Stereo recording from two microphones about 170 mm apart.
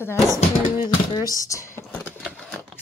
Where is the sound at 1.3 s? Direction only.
20° left (ahead or behind).